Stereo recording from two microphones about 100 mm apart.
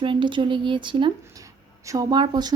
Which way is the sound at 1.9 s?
40° right (ahead or behind).